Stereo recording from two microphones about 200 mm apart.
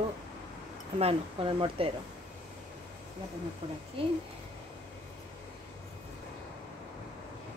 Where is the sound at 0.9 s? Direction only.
30° right (ahead or behind).